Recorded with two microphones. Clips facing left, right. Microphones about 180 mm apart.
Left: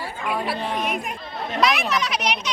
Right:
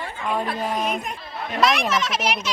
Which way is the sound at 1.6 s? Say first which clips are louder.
Right 1 dB; centre (ahead or behind).